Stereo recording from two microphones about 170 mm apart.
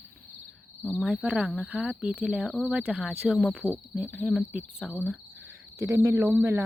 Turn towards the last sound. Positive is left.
turn(degrees=-15)  # may be behind; listen again after turning